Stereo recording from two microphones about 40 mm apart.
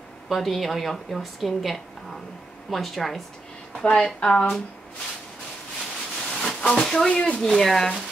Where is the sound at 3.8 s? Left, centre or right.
Left.